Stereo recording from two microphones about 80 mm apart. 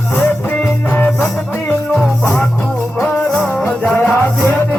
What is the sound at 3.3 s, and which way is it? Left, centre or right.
Music, centre.